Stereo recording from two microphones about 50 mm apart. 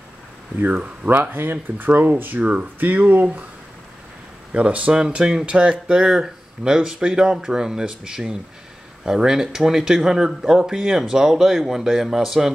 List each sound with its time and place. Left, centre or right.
0.7 s speech: right
1.3 s speech: right
4.5 s speech: right; by 12.4 s centre